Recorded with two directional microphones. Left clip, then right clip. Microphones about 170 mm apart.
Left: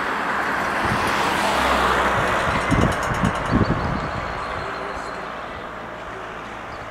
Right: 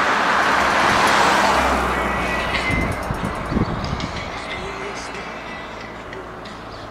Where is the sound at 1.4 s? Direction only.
Centre (ahead or behind).